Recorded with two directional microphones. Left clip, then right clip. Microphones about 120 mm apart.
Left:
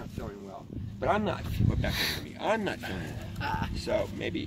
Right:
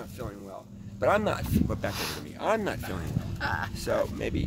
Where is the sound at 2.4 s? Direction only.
30° right (ahead or behind).